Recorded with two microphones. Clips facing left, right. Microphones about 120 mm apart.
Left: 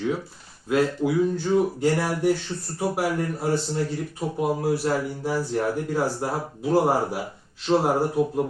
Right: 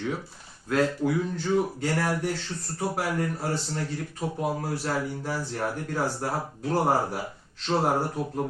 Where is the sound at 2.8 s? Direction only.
10° left (ahead or behind).